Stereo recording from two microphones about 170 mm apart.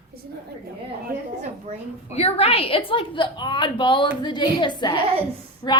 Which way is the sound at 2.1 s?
40° left (ahead or behind).